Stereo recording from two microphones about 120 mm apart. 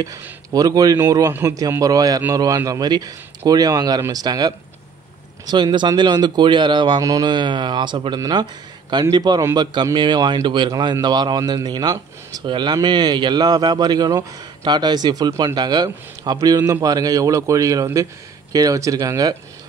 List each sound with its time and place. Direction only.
0.0 s speech: 30° right (ahead or behind)
0.9 s a man's voice: 20° right (ahead or behind)
9.4 s a man's voice: 25° right (ahead or behind)
9.9 s a man's voice: 40° right (ahead or behind)